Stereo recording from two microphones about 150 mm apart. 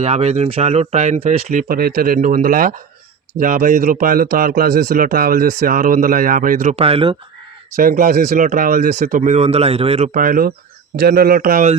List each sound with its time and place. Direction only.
0.0 s speech: 45° right (ahead or behind)
1.6 s a man's voice: 75° right (ahead or behind)
6.7 s speech: 40° right (ahead or behind)
7.8 s speech: 70° right (ahead or behind); by 10.1 s 40° right (ahead or behind)
10.2 s a man's voice: 70° right (ahead or behind)
11.0 s speech: 80° right